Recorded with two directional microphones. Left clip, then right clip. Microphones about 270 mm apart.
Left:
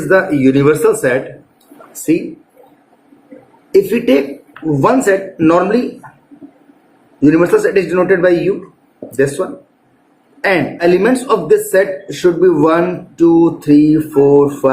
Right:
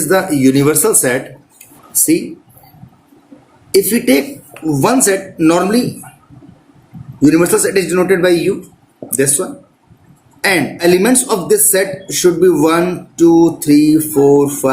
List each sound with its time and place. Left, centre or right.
0.1 s speech: right
3.7 s speech: right
7.2 s speech: right